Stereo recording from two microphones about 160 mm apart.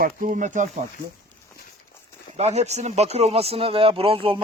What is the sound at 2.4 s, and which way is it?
Speech, 45° right (ahead or behind).